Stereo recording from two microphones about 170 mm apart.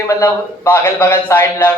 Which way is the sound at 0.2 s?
15° left (ahead or behind).